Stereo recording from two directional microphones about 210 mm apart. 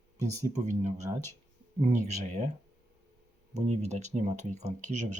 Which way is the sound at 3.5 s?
30° right (ahead or behind).